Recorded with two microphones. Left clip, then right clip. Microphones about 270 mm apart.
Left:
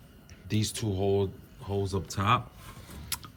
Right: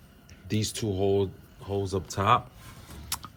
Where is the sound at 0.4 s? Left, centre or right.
Centre.